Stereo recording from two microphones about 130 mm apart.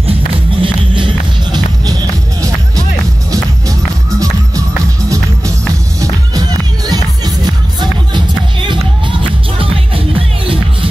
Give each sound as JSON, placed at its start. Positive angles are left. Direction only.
{"t": 0.6, "sound": "music", "side_deg": -40}
{"t": 5.9, "sound": "music", "side_deg": -25}